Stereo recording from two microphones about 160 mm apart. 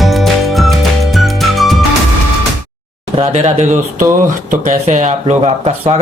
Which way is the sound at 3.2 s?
40° right (ahead or behind).